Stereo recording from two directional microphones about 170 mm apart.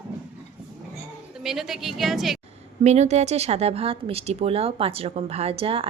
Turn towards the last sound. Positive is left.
turn(degrees=-35)  # may be behind; listen again after turning